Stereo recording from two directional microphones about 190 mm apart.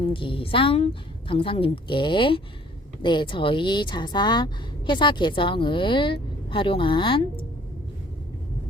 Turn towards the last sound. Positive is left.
turn(degrees=25)  # may be behind; listen again after turning